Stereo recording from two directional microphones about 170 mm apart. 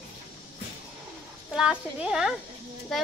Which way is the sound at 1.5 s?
5° right (ahead or behind).